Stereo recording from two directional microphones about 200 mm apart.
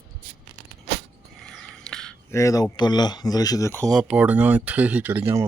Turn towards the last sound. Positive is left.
turn(degrees=-10)  # may be behind; listen again after turning